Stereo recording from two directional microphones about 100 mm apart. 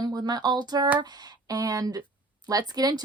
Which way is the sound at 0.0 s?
45° right (ahead or behind).